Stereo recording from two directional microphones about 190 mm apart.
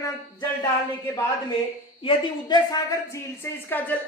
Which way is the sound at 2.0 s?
20° left (ahead or behind).